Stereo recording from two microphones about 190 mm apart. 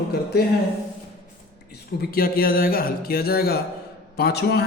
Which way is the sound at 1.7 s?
55° left (ahead or behind).